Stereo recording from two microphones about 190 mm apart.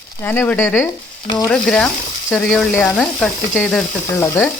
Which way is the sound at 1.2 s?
25° left (ahead or behind).